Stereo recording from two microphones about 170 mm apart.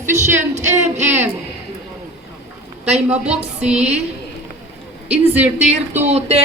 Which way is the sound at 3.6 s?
5° right (ahead or behind).